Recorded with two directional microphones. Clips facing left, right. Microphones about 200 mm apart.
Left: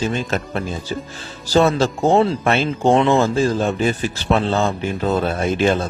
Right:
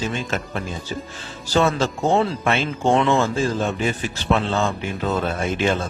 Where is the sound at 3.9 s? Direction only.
35° left (ahead or behind).